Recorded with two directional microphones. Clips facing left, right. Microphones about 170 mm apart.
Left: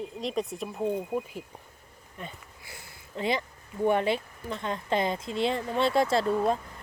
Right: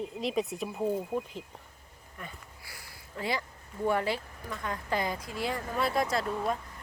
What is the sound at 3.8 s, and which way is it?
A woman's voice, 20° left (ahead or behind).